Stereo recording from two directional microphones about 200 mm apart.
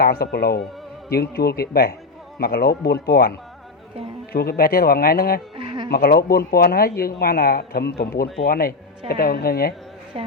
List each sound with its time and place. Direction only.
0.0 s speech: 50° left (ahead or behind)
5.5 s insect: 20° right (ahead or behind)
5.9 s speech: 50° left (ahead or behind)
10.1 s a woman's voice: 30° right (ahead or behind)